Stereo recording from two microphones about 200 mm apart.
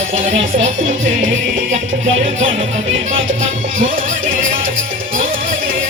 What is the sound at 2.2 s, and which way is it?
Music, 30° right (ahead or behind).